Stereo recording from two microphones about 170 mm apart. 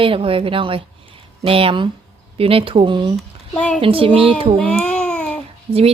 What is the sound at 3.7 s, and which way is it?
Speech, 30° right (ahead or behind).